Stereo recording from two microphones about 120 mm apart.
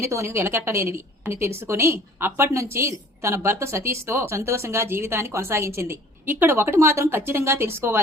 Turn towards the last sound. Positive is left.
turn(degrees=-20)  # may be behind; listen again after turning